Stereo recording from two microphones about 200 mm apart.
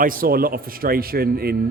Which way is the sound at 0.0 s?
45° right (ahead or behind).